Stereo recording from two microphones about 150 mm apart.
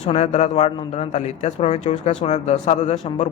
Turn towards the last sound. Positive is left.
turn(degrees=45)  # may be behind; listen again after turning